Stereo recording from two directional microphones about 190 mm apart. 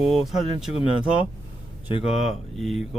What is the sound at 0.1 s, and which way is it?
Speech, centre (ahead or behind).